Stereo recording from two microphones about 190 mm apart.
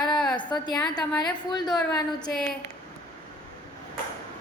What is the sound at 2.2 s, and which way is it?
Speech, centre (ahead or behind).